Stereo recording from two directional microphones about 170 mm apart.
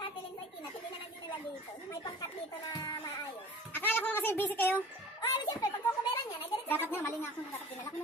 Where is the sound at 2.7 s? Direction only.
20° left (ahead or behind).